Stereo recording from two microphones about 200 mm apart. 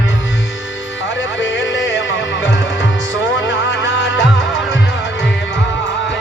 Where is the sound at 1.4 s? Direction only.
65° left (ahead or behind).